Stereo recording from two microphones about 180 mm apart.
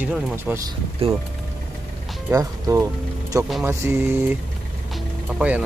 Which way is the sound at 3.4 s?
Centre (ahead or behind).